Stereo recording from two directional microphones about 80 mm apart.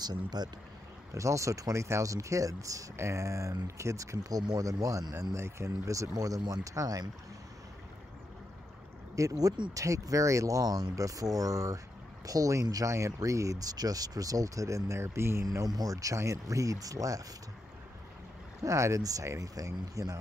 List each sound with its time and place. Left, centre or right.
0.0 s speech: right
1.1 s speech: right
9.1 s speech: right
15.4 s speech: right
18.6 s speech: right